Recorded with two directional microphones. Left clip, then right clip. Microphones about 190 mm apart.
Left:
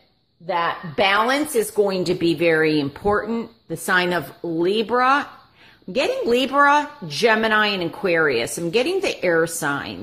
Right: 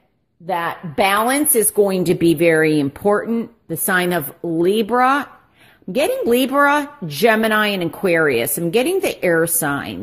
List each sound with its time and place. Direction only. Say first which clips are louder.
0.5 s speech: even; 45° right (ahead or behind)